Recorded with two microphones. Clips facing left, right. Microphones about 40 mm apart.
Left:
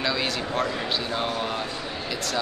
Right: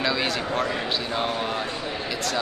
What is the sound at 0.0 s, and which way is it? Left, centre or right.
Speech, centre.